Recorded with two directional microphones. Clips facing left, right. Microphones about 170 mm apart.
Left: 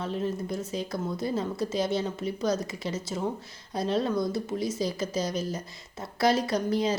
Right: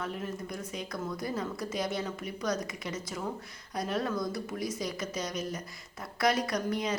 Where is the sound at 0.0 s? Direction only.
30° left (ahead or behind).